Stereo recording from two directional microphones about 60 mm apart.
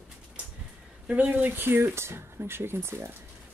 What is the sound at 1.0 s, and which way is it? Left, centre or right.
Speech, right.